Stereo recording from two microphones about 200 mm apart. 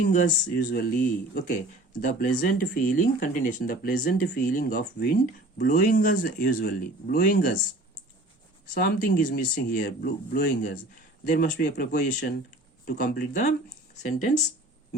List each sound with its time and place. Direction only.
0.1 s speech: 40° left (ahead or behind)
8.7 s speech: 45° left (ahead or behind)